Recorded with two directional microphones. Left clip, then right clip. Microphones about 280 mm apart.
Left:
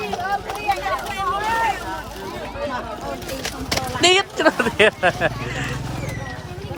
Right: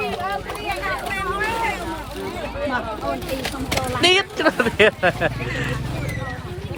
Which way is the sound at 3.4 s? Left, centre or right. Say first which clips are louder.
Right 1 dB; centre.